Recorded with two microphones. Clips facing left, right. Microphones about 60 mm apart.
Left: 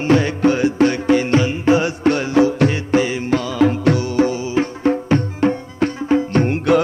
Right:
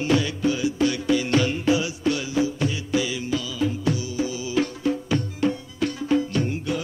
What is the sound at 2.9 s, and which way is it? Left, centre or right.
Music, left.